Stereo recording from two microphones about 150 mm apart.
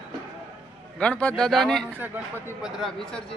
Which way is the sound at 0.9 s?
10° left (ahead or behind).